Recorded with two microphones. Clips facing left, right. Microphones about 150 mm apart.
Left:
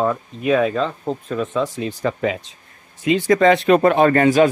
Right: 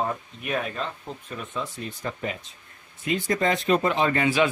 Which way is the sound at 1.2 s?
90° left.